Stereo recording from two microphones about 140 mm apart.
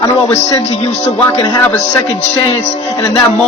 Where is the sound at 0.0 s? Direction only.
20° left (ahead or behind).